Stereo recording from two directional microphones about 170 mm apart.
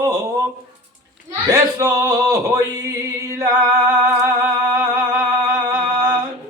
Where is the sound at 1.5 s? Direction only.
15° right (ahead or behind).